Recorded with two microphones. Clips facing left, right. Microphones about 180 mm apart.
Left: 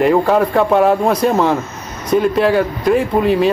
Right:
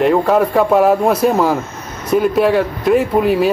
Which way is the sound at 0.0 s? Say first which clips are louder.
Even; centre (ahead or behind).